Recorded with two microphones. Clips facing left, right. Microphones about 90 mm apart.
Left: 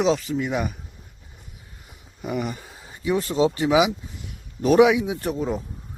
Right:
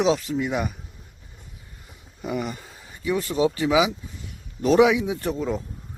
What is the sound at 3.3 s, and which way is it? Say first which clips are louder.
Speech: left 1 dB; 20° left (ahead or behind).